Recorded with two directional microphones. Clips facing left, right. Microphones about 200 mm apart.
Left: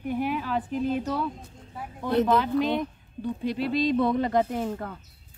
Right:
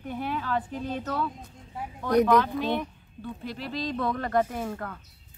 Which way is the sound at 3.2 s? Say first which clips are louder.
Left 8 dB; 20° left (ahead or behind).